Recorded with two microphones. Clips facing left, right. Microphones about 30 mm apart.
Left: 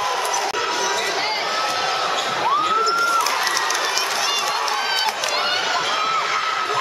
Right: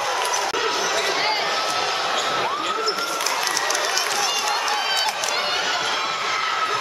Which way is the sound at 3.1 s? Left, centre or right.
Centre.